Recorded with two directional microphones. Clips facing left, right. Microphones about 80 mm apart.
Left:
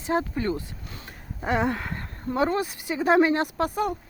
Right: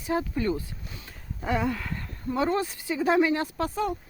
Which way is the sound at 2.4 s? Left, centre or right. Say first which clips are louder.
Left 2 dB; centre.